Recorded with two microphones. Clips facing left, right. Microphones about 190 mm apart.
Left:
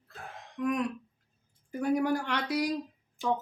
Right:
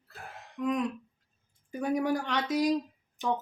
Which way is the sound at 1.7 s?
20° right (ahead or behind).